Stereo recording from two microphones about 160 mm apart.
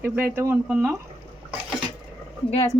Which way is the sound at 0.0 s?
15° right (ahead or behind).